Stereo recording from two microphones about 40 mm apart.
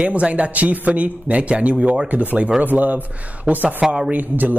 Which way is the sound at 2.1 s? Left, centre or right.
Right.